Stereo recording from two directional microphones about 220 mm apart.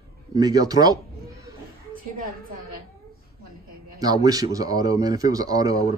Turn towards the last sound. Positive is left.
turn(degrees=-15)  # may be behind; listen again after turning